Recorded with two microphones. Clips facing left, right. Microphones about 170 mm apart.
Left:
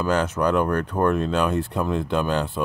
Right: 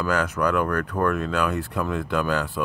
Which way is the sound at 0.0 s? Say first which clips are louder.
Left 2 dB; 25° left (ahead or behind).